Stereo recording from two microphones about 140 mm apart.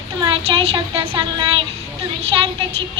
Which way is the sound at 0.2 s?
40° right (ahead or behind).